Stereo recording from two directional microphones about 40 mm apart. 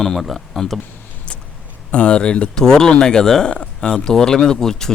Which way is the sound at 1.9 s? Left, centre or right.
Left.